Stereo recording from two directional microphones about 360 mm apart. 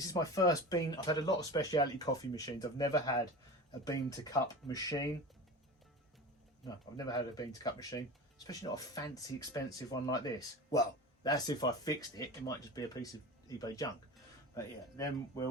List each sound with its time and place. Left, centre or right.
0.0 s speech: centre
6.7 s speech: centre